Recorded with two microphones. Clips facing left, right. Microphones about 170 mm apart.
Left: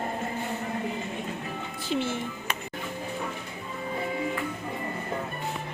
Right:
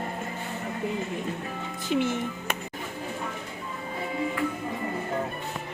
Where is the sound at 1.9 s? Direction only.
15° right (ahead or behind).